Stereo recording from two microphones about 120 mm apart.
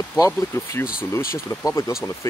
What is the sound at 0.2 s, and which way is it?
Speech, 25° left (ahead or behind).